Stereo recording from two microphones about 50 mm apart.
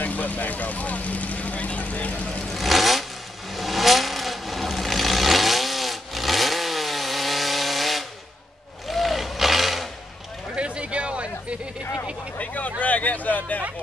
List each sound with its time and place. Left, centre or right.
0.0 s vehicle: left
2.5 s vehicle: centre
10.5 s a sound: right
11.8 s vehicle: left
12.4 s vehicle: left
12.8 s a sound: left